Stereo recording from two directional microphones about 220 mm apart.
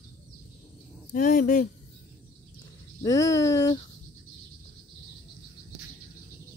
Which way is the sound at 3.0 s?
15° left (ahead or behind).